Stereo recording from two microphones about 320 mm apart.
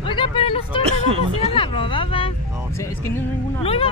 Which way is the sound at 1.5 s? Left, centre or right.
Centre.